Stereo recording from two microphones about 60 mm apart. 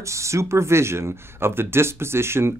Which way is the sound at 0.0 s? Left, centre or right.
Right.